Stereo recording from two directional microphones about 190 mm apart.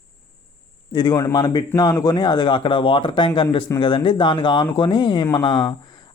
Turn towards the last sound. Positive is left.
turn(degrees=25)  # may be behind; listen again after turning